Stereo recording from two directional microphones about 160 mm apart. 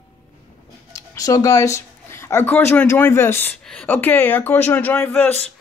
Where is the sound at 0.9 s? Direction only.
20° left (ahead or behind).